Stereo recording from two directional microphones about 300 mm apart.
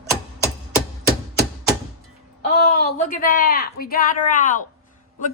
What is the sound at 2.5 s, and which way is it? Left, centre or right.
Speech, left.